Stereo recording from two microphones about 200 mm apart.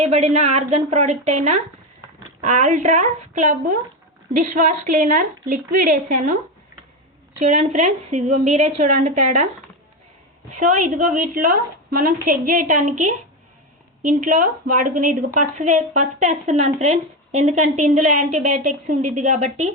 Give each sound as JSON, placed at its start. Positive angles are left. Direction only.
{"t": 0.0, "sound": "a woman's voice", "side_deg": -35}
{"t": 10.5, "sound": "a woman's voice", "side_deg": -40}
{"t": 14.1, "sound": "a woman's voice", "side_deg": -40}